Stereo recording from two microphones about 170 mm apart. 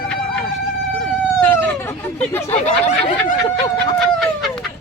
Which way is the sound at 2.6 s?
45° left (ahead or behind).